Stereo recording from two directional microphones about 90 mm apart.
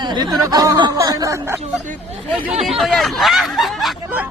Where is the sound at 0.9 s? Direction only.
40° right (ahead or behind).